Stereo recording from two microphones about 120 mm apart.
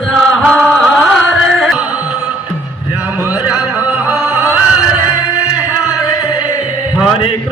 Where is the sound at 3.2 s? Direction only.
10° right (ahead or behind).